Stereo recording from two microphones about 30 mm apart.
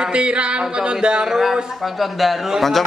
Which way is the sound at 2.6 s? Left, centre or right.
Centre.